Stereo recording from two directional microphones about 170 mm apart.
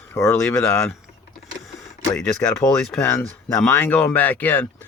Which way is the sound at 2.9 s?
5° left (ahead or behind).